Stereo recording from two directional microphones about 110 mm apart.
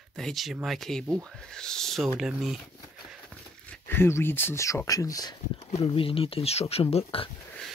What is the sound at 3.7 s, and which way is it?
Speech, 20° left (ahead or behind).